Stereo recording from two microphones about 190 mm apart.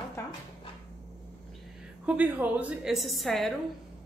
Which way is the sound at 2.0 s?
5° right (ahead or behind).